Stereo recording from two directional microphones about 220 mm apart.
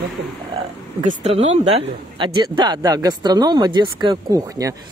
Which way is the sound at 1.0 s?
35° right (ahead or behind).